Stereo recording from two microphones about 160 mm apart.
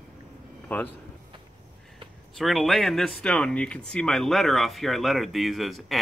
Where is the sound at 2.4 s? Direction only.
Centre (ahead or behind).